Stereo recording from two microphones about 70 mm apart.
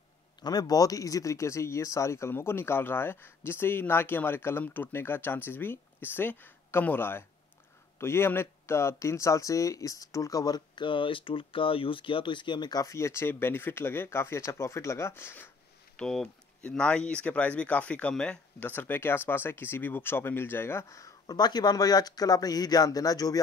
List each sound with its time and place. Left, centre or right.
0.4 s speech: left
12.4 s speech: left
12.8 s speech: left
16.0 s speech: centre
18.6 s speech: left
21.3 s speech: left